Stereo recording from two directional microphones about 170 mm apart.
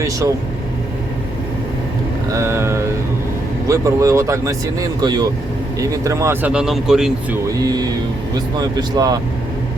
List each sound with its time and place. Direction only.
2.3 s vehicle: 15° right (ahead or behind)
3.7 s speech: 20° right (ahead or behind); by 7.3 s 5° right (ahead or behind)
7.6 s speech: 25° right (ahead or behind)